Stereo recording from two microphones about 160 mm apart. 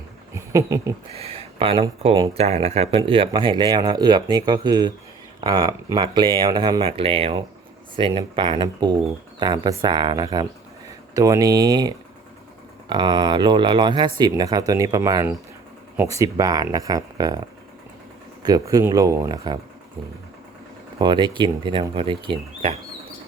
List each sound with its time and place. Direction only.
0.3 s speech: 20° right (ahead or behind)
1.2 s speech: 35° right (ahead or behind)
18.4 s speech: 25° right (ahead or behind)
21.0 s speech: 30° right (ahead or behind)